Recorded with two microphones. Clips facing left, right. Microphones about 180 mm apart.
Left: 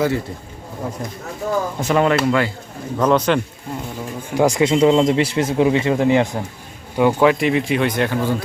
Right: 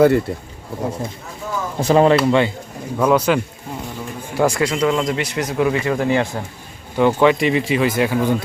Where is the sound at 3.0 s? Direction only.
10° right (ahead or behind).